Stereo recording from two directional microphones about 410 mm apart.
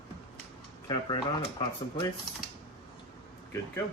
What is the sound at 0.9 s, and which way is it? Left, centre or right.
A woman's voice, centre.